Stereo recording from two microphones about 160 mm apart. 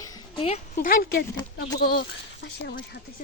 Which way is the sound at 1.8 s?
85° left.